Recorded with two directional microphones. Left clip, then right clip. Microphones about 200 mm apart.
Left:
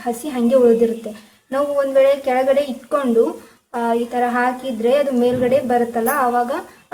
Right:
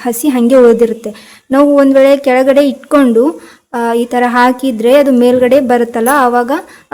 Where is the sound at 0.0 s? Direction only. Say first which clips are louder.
Right 9 dB; 55° right (ahead or behind).